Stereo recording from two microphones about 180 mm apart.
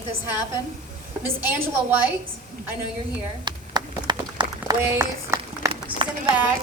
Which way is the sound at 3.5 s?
25° right (ahead or behind).